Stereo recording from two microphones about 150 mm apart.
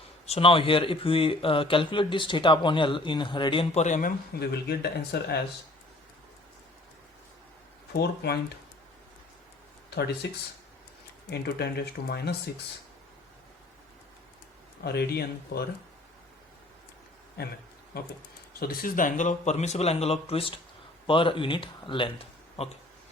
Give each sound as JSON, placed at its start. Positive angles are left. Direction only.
{"t": 0.3, "sound": "speech", "side_deg": 40}
{"t": 3.8, "sound": "speech", "side_deg": 55}
{"t": 7.9, "sound": "speech", "side_deg": 90}
{"t": 11.3, "sound": "speech", "side_deg": 90}
{"t": 14.8, "sound": "speech", "side_deg": 90}
{"t": 17.4, "sound": "speech", "side_deg": 90}
{"t": 18.6, "sound": "a man's voice", "side_deg": 70}
{"t": 22.6, "sound": "a man's voice", "side_deg": 45}